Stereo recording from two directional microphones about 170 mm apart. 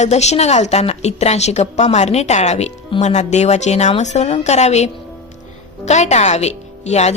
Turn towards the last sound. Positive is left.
turn(degrees=40)  # may be behind; listen again after turning